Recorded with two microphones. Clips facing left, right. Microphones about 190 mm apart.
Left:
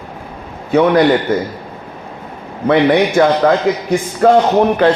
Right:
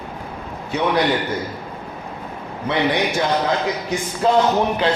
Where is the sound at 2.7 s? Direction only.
60° left (ahead or behind).